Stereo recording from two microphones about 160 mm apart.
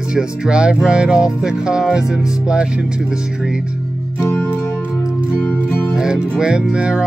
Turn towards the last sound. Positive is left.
turn(degrees=-5)  # may be behind; listen again after turning